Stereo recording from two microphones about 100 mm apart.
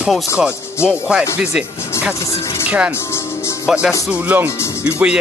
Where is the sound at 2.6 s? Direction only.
15° right (ahead or behind).